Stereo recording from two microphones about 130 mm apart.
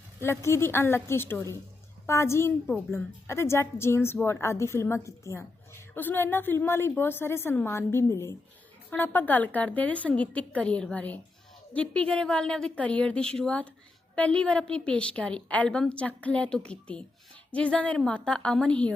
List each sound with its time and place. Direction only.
0.2 s a woman's voice: 20° left (ahead or behind)